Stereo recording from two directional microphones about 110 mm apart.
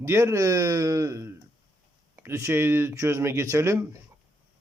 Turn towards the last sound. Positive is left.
turn(degrees=-25)  # may be behind; listen again after turning